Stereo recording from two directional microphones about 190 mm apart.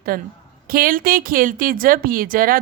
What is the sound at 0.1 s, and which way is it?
Speech, 50° right (ahead or behind).